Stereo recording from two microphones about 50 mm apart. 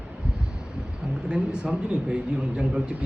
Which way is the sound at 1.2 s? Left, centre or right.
Centre.